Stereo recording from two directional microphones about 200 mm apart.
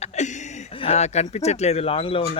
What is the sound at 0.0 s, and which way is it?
Speech, 35° left (ahead or behind).